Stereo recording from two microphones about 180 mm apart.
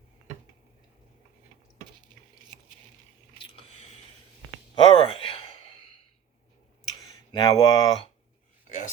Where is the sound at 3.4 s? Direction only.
30° left (ahead or behind).